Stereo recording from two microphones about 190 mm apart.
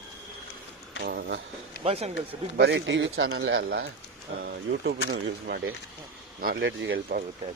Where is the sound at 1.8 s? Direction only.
35° right (ahead or behind).